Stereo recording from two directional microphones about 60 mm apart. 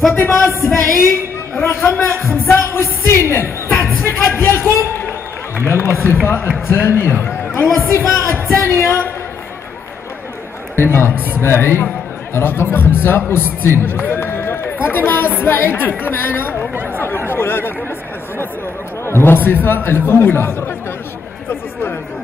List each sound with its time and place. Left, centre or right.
0.1 s a man's voice: left
0.5 s a woman's voice: left
4.0 s a sound: left
5.6 s a man's voice: left
8.5 s a man's voice: left
10.8 s a man's voice: left
16.7 s chatter: right
17.0 s speech: left
19.0 s a man's voice: left